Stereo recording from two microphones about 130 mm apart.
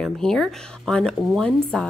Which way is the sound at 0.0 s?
5° left (ahead or behind).